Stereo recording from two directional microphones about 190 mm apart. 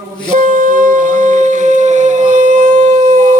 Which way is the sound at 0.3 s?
45° right (ahead or behind).